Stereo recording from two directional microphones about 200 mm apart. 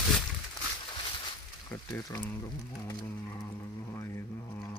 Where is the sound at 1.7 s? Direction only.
20° left (ahead or behind).